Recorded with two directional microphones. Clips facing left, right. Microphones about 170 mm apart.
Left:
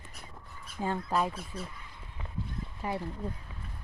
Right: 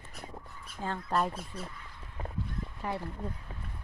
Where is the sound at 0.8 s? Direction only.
10° left (ahead or behind).